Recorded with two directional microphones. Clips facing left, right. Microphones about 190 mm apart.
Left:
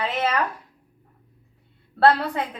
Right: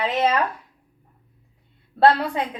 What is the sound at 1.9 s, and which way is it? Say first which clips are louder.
Speech: right 1 dB; 15° right (ahead or behind).